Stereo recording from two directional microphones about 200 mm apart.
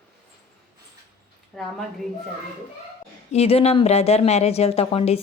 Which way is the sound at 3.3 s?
30° left (ahead or behind).